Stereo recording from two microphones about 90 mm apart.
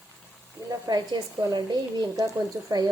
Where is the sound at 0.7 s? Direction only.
50° right (ahead or behind).